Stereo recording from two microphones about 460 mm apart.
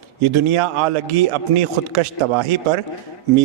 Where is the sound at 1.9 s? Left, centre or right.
Right.